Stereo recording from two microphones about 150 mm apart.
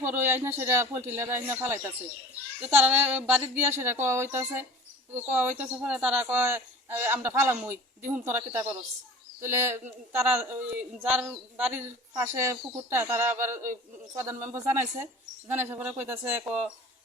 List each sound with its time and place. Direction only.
0.0 s a woman's voice: 15° right (ahead or behind)